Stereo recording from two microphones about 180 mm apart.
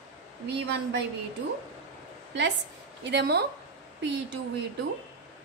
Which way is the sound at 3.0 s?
65° right (ahead or behind).